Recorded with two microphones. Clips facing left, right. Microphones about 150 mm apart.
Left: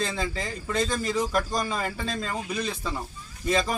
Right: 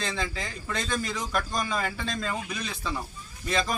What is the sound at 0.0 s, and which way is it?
Speech, 5° left (ahead or behind).